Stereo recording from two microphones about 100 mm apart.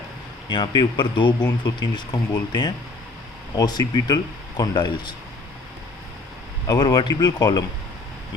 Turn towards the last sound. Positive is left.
turn(degrees=40)  # may be behind; listen again after turning